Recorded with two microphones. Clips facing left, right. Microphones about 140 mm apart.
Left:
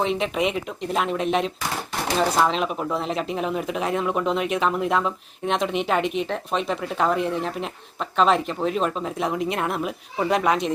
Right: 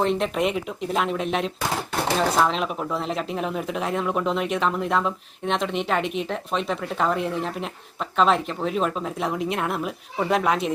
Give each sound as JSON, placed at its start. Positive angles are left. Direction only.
{"t": 0.0, "sound": "speech", "side_deg": 0}